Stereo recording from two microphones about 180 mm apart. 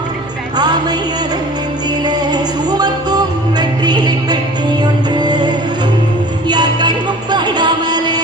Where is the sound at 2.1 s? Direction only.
25° right (ahead or behind).